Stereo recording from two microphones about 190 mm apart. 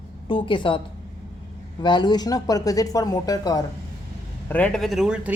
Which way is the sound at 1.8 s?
25° left (ahead or behind).